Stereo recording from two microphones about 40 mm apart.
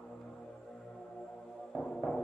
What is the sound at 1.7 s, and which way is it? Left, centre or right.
Music, centre.